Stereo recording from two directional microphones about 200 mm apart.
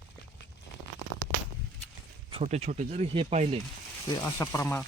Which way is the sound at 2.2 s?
30° right (ahead or behind).